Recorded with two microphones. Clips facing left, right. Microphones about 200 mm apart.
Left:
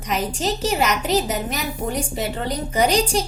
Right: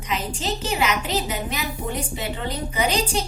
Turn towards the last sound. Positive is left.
turn(degrees=45)  # may be behind; listen again after turning